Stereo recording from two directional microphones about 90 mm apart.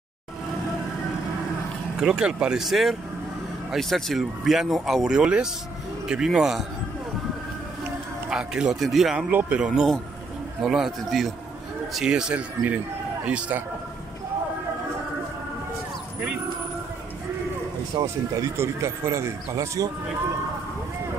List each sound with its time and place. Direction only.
2.0 s speech: 10° right (ahead or behind)
8.3 s speech: 10° right (ahead or behind)
9.3 s speech: 15° right (ahead or behind)
10.6 s a man's voice: 5° right (ahead or behind)
18.0 s speech: 35° right (ahead or behind)